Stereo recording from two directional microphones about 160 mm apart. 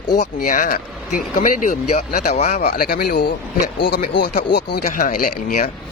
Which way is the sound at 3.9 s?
80° left.